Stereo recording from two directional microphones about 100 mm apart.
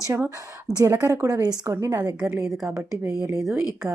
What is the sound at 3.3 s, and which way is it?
Speech, 5° right (ahead or behind).